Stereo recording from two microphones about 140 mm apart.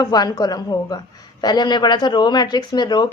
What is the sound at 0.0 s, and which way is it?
A man's voice, 30° left (ahead or behind).